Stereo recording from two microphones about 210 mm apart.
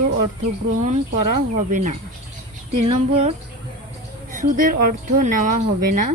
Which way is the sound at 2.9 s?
30° right (ahead or behind).